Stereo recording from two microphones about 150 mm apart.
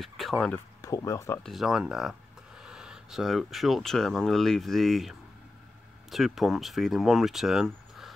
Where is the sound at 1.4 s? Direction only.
5° right (ahead or behind).